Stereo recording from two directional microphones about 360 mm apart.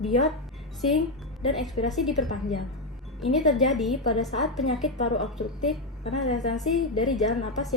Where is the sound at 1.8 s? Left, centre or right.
Centre.